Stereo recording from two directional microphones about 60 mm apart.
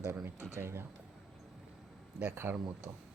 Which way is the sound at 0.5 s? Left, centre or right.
Right.